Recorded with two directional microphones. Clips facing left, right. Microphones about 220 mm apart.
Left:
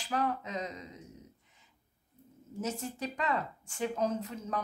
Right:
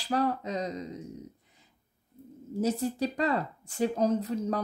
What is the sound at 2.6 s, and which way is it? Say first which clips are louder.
A woman's voice: right 8 dB; 35° right (ahead or behind).